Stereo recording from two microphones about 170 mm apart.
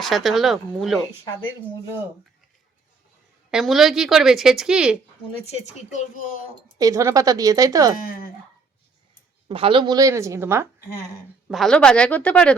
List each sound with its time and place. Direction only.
0.0 s a woman's voice: centre (ahead or behind)
3.5 s a woman's voice: centre (ahead or behind)
5.5 s speech: 45° left (ahead or behind)
6.7 s a woman's voice: 20° right (ahead or behind)
8.0 s speech: 60° left (ahead or behind)
9.5 s a woman's voice: 30° right (ahead or behind); by 10.7 s 15° right (ahead or behind)
11.4 s speech: centre (ahead or behind)